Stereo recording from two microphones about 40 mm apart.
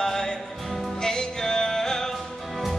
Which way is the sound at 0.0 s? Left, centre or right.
Centre.